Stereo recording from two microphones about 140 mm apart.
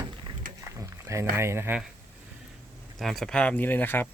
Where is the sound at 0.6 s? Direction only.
20° right (ahead or behind).